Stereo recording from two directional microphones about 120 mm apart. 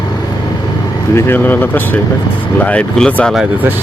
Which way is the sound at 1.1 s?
15° left (ahead or behind).